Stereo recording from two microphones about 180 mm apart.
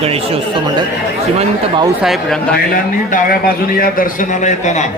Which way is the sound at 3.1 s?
55° left (ahead or behind).